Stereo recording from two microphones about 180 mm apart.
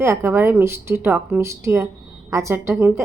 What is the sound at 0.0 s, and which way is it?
A woman's voice, 15° right (ahead or behind).